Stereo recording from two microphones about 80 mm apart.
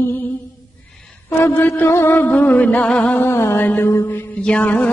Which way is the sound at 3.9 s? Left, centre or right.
Left.